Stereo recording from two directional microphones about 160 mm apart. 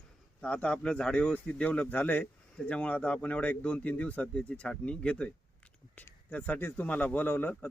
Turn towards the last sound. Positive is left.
turn(degrees=10)  # may be behind; listen again after turning